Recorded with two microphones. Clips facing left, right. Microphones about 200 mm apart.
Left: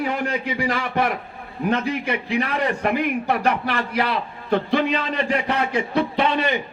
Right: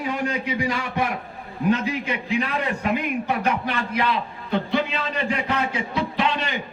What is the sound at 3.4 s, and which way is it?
A man's voice, 55° left (ahead or behind).